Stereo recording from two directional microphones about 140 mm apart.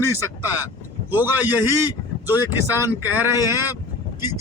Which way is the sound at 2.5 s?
15° right (ahead or behind).